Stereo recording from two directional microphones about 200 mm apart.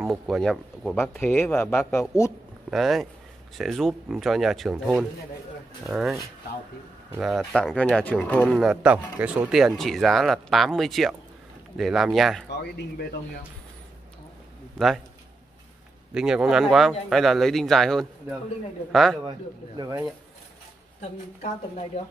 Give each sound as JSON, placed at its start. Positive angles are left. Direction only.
{"t": 0.1, "sound": "speech", "side_deg": 0}
{"t": 2.7, "sound": "speech", "side_deg": 0}
{"t": 16.1, "sound": "speech", "side_deg": -5}
{"t": 19.8, "sound": "speech", "side_deg": -15}
{"t": 21.4, "sound": "speech", "side_deg": 30}